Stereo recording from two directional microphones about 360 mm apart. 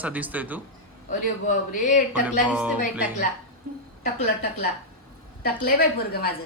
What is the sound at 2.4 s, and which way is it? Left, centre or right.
Speech, centre.